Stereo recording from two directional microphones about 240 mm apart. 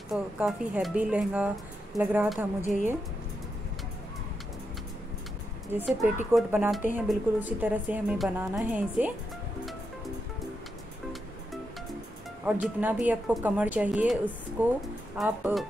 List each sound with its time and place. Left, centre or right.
0.1 s a woman's voice: centre
2.6 s a woman's voice: left
5.7 s a woman's voice: centre
12.4 s a woman's voice: centre